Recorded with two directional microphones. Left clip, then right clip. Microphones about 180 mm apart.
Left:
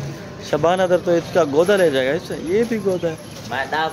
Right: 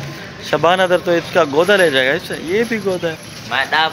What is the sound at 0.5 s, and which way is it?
Speech, centre (ahead or behind).